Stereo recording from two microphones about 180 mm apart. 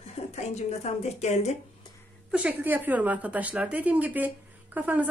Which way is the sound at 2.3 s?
5° right (ahead or behind).